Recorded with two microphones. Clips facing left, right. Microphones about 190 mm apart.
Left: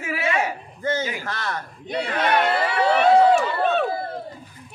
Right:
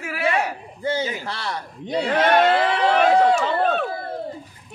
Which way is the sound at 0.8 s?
10° right (ahead or behind).